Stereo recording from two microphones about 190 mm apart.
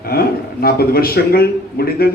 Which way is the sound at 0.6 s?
55° left (ahead or behind).